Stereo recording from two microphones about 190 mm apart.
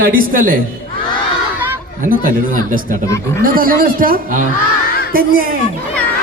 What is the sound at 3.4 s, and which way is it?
A man's voice, 50° right (ahead or behind).